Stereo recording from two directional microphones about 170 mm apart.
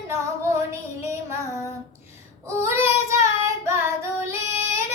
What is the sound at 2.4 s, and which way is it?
Child singing, 15° right (ahead or behind).